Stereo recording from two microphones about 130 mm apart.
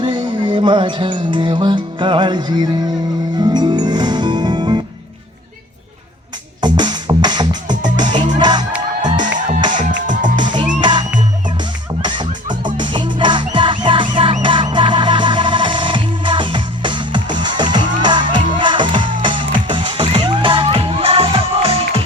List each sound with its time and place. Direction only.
0.0 s music: 40° right (ahead or behind)
6.6 s music: 35° right (ahead or behind)
9.9 s music: 80° right
10.4 s music: 35° right (ahead or behind)